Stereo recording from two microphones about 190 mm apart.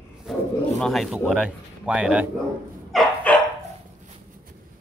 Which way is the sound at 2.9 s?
Centre (ahead or behind).